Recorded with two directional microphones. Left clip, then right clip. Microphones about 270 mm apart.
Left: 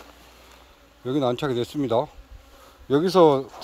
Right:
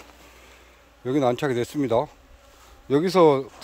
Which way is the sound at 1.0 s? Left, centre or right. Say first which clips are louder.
Right 2 dB; centre.